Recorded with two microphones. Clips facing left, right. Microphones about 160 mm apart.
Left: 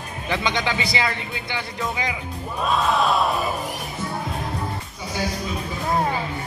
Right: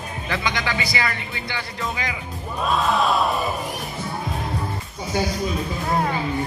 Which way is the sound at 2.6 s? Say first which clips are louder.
Even; centre (ahead or behind).